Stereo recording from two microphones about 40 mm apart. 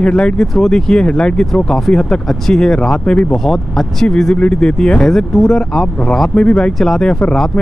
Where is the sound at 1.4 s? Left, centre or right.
Centre.